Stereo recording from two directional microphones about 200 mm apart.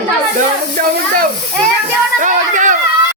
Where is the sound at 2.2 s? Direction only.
40° right (ahead or behind).